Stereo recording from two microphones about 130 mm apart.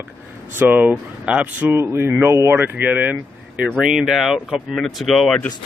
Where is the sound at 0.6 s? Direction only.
15° right (ahead or behind).